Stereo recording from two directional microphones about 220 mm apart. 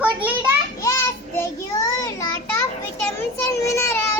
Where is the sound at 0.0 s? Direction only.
5° right (ahead or behind).